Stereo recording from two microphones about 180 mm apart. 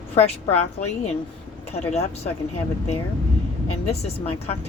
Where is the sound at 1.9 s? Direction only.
35° left (ahead or behind).